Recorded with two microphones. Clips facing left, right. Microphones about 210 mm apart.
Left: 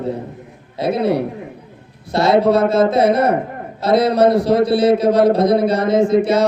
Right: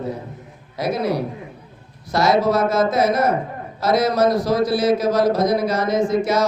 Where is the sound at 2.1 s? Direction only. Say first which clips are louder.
Left 2 dB; 30° left (ahead or behind).